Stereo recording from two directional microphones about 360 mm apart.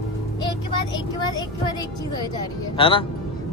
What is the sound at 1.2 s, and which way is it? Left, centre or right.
Speech, centre.